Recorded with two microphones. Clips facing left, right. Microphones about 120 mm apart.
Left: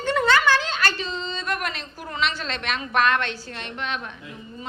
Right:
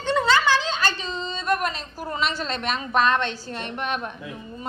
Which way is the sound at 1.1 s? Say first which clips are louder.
Right 3 dB; 35° right (ahead or behind).